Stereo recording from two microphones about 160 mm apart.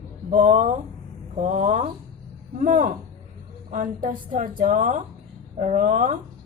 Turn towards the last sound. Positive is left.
turn(degrees=-55)  # may be behind; listen again after turning